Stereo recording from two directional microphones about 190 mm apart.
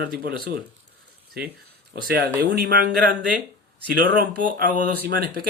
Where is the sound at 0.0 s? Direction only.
55° right (ahead or behind).